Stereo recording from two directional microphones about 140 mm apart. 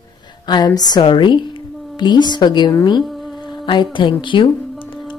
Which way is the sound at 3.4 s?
35° left (ahead or behind).